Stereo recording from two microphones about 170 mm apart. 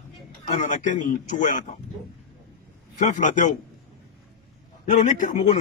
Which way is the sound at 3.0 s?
50° left (ahead or behind).